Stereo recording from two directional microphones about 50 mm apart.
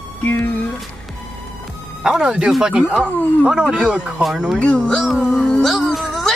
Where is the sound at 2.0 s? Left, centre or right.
Centre.